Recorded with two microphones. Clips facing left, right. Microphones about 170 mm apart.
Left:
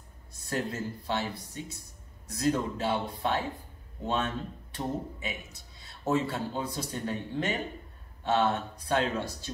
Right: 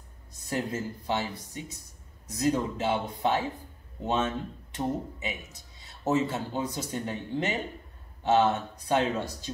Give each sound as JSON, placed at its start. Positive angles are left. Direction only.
{"t": 0.3, "sound": "speech", "side_deg": -20}